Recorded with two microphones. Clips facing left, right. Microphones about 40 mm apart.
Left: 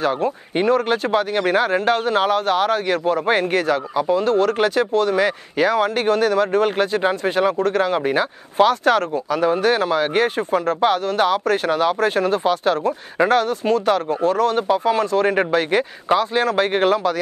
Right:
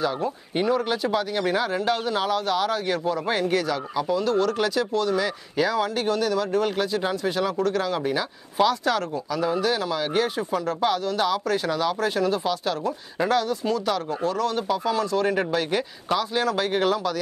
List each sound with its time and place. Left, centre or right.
0.7 s speech: left